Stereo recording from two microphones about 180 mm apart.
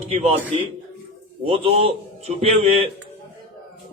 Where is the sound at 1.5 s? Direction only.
30° right (ahead or behind).